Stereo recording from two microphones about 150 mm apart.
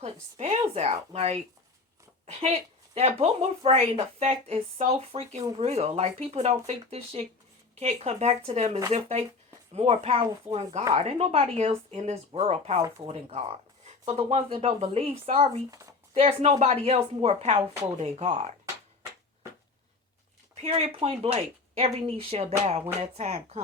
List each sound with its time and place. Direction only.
0.0 s speech: 45° right (ahead or behind)
15.7 s speech: 20° right (ahead or behind)
16.1 s speech: 45° right (ahead or behind)
20.6 s speech: 45° right (ahead or behind)